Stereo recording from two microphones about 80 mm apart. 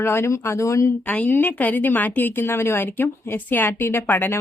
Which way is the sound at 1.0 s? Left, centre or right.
Centre.